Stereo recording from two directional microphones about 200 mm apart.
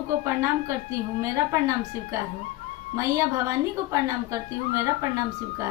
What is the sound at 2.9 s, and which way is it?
Speech, 15° right (ahead or behind).